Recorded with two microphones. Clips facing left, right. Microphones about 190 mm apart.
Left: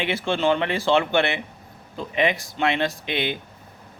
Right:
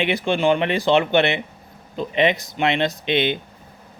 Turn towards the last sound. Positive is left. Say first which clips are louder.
# right 5 dB
turn(degrees=-20)  # may be behind; listen again after turning